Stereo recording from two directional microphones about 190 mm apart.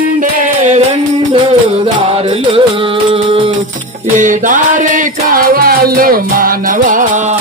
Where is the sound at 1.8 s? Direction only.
30° right (ahead or behind).